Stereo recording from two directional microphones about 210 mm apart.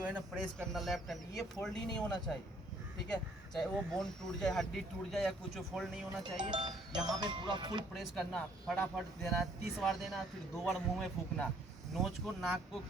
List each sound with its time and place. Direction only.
0.0 s speech: 5° right (ahead or behind)
3.5 s speech: centre (ahead or behind)
6.2 s speech: 20° right (ahead or behind)
7.9 s speech: 5° left (ahead or behind)